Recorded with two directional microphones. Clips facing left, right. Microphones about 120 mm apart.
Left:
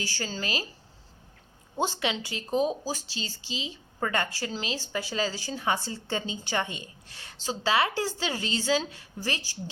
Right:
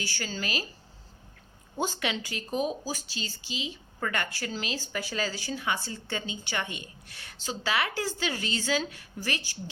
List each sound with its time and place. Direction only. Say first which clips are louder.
0.0 s speech: left 1 dB; 35° left (ahead or behind)
1.8 s speech: left 2 dB; 25° left (ahead or behind)